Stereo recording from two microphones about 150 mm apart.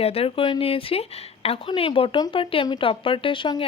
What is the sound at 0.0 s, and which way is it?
Speech, 40° left (ahead or behind).